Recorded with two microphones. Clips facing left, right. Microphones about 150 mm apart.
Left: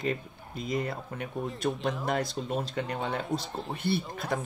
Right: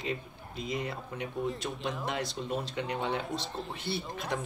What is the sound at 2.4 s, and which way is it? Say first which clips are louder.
Speech: left 2 dB; 45° left (ahead or behind).